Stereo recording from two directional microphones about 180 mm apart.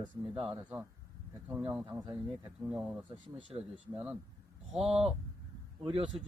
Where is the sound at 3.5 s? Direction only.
25° right (ahead or behind).